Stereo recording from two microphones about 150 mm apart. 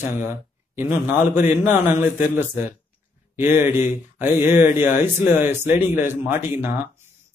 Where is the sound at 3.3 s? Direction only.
15° right (ahead or behind).